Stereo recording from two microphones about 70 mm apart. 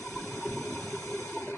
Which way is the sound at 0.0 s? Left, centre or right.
Left.